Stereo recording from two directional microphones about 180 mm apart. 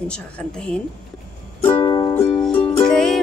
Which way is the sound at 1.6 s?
15° left (ahead or behind).